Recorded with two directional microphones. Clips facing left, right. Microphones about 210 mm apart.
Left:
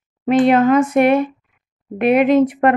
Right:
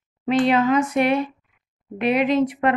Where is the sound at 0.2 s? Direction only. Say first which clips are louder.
Left 5 dB; 55° left (ahead or behind).